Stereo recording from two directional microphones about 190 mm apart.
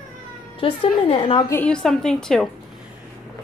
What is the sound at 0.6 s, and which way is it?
Speech, 30° left (ahead or behind).